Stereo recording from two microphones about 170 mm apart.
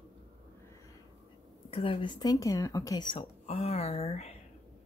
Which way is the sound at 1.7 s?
30° left (ahead or behind).